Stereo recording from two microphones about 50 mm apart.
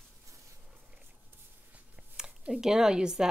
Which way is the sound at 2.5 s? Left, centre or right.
Centre.